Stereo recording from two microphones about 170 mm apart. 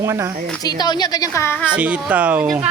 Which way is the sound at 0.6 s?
25° left (ahead or behind).